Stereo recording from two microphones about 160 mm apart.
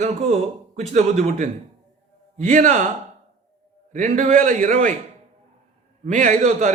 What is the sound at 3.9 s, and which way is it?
A man's voice, 50° right (ahead or behind).